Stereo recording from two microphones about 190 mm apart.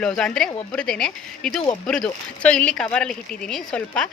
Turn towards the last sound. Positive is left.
turn(degrees=5)  # may be behind; listen again after turning